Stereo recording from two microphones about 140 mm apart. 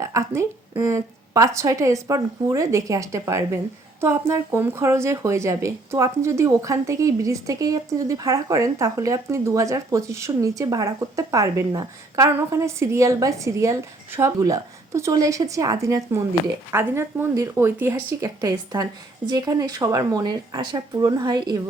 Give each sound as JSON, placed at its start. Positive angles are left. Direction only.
{"t": 0.0, "sound": "a woman's voice", "side_deg": -20}